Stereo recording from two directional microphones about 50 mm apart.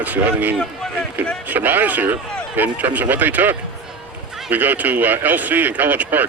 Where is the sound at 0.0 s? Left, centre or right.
Right.